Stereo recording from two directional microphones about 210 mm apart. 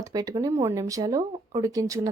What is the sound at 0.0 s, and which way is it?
Speech, 15° right (ahead or behind).